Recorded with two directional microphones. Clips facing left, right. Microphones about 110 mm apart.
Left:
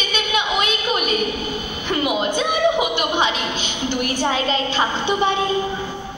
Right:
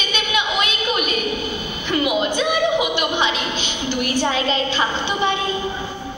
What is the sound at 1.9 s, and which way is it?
A woman's voice, 40° left (ahead or behind).